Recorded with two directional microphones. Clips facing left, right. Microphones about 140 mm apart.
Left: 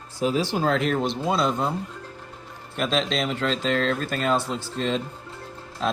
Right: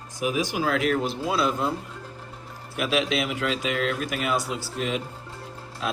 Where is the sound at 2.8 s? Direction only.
10° right (ahead or behind).